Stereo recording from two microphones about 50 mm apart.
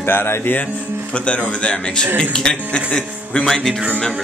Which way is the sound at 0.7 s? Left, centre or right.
Right.